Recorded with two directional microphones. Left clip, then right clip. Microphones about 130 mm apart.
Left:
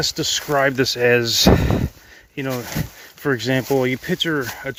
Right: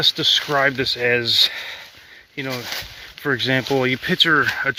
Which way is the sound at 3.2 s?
35° left (ahead or behind).